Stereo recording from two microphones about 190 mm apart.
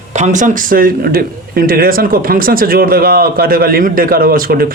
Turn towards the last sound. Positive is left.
turn(degrees=-50)  # may be behind; listen again after turning